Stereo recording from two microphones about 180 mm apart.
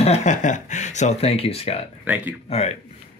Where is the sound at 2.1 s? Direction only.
10° right (ahead or behind).